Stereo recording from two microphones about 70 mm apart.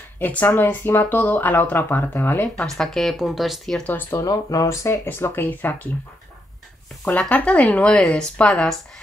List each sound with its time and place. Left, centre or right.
0.2 s speech: left
2.8 s speech: centre
4.2 s speech: left
5.0 s speech: left
7.1 s speech: left